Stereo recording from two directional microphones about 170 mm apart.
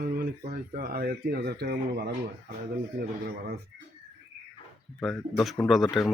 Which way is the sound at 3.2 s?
65° right (ahead or behind).